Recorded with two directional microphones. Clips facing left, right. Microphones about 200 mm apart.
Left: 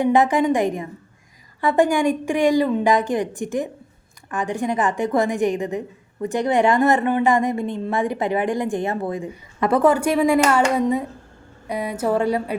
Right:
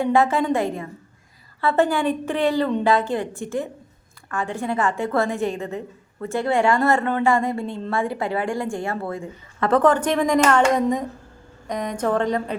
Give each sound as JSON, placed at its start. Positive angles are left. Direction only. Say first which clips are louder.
{"t": 0.0, "sound": "a woman's voice", "louder": "left 2 dB", "side_deg": 20}